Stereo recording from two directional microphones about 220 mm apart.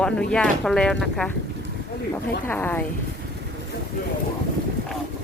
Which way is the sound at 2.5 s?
10° left (ahead or behind).